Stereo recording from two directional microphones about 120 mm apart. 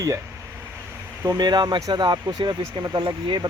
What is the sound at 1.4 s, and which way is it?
Speech, 35° right (ahead or behind).